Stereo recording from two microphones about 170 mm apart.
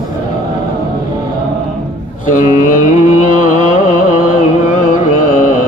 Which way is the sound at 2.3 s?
50° left (ahead or behind).